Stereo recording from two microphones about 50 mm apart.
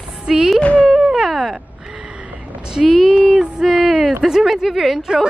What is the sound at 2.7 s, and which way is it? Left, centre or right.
Speech, centre.